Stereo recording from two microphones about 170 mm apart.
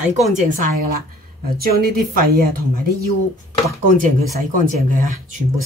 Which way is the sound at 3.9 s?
50° right (ahead or behind).